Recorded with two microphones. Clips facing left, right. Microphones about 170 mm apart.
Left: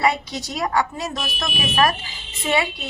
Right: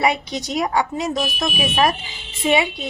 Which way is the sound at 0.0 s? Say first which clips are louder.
Right 1 dB; 20° right (ahead or behind).